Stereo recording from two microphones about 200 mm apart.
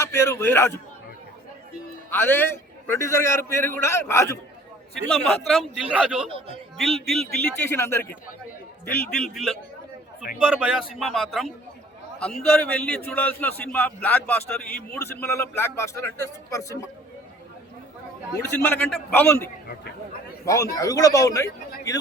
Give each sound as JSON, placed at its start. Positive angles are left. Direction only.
{"t": 0.0, "sound": "speech", "side_deg": 15}
{"t": 2.0, "sound": "speech", "side_deg": 10}
{"t": 5.5, "sound": "a man's voice", "side_deg": 0}
{"t": 18.4, "sound": "speech", "side_deg": 10}